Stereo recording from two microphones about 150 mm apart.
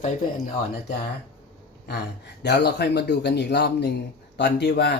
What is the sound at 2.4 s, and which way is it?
Speech, 90° left.